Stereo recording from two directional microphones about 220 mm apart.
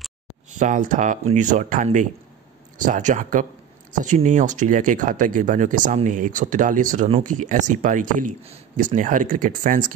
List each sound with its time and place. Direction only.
0.6 s speech: 35° right (ahead or behind)